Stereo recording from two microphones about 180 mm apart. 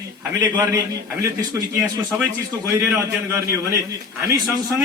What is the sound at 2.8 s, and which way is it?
A man's voice, 15° right (ahead or behind).